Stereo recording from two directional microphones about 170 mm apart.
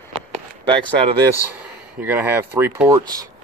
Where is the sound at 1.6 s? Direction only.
10° right (ahead or behind).